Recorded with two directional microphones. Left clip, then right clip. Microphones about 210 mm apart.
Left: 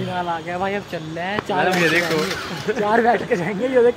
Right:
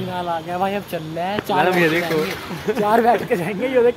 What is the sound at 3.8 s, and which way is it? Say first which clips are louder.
Speech: even; 20° left (ahead or behind).